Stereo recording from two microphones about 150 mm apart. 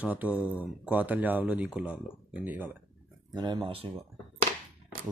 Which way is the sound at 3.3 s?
30° right (ahead or behind).